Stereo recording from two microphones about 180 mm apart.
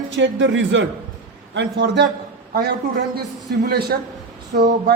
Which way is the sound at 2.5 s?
60° right (ahead or behind).